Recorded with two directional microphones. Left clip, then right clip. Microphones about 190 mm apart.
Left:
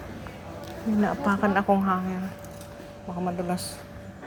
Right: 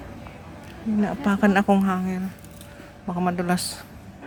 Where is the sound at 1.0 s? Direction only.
35° right (ahead or behind).